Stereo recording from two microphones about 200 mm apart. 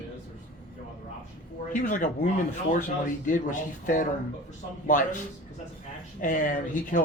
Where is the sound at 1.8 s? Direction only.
40° left (ahead or behind).